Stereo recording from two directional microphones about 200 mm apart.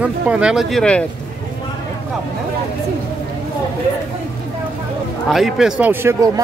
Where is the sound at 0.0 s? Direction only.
5° right (ahead or behind).